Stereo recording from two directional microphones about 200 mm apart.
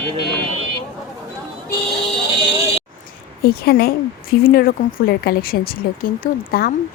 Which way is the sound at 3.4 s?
50° left (ahead or behind).